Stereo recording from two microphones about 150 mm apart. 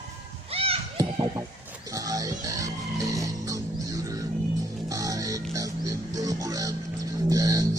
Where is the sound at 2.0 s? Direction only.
25° right (ahead or behind).